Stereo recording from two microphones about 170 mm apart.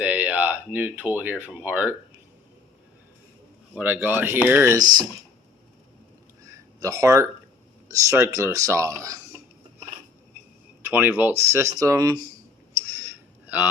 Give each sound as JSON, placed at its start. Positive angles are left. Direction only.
{"t": 0.0, "sound": "speech", "side_deg": -10}
{"t": 3.8, "sound": "speech", "side_deg": -10}
{"t": 6.4, "sound": "a sound", "side_deg": -20}
{"t": 7.9, "sound": "speech", "side_deg": -20}
{"t": 10.8, "sound": "speech", "side_deg": -10}
{"t": 12.7, "sound": "a sound", "side_deg": -15}